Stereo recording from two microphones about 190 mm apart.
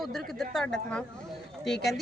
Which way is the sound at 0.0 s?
Centre (ahead or behind).